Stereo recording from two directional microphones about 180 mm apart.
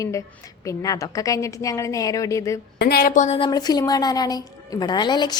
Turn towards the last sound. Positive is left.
turn(degrees=25)  # may be behind; listen again after turning